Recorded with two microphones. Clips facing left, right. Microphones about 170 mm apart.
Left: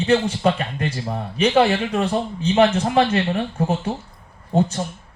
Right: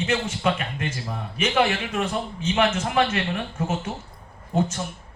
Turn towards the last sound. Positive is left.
turn(degrees=35)  # may be behind; listen again after turning